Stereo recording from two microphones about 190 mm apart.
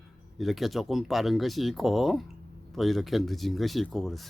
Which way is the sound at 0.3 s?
Centre (ahead or behind).